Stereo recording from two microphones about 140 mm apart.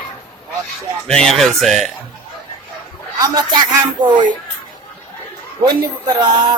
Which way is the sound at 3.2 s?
25° right (ahead or behind).